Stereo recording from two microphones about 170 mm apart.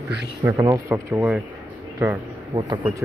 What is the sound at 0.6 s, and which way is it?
Speech, 15° right (ahead or behind).